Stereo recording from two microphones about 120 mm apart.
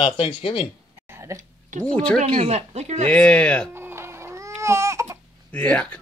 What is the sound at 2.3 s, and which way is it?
Speech, 60° right (ahead or behind).